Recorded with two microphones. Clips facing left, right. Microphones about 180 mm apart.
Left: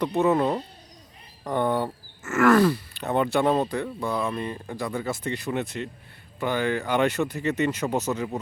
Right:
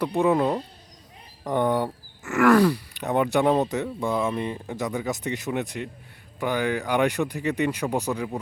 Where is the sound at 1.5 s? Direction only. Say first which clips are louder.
Right 1 dB; 15° right (ahead or behind).